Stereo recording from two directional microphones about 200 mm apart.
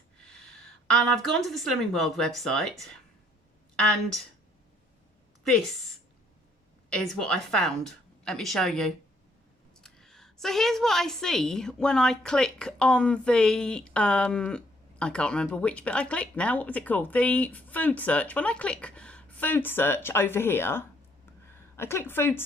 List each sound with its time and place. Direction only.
0.2 s a sound: 5° left (ahead or behind)
1.5 s a woman's voice: centre (ahead or behind)
6.9 s a woman's voice: centre (ahead or behind)